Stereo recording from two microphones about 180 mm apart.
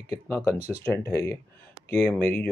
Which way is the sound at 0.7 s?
15° left (ahead or behind).